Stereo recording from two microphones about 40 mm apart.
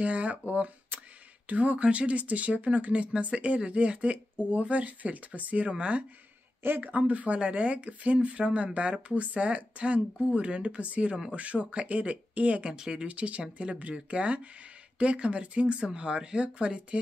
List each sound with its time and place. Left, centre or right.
0.0 s speech: right